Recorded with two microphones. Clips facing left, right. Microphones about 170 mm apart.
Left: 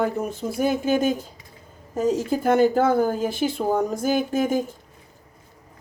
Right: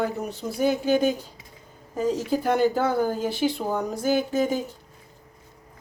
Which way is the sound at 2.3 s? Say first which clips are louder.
Left 3 dB; 50° left (ahead or behind).